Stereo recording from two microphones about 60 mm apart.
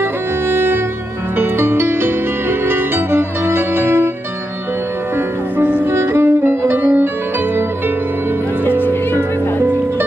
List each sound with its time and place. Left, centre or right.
0.0 s music: right
5.6 s music: right
5.9 s music: right
6.8 s music: right
8.6 s music: left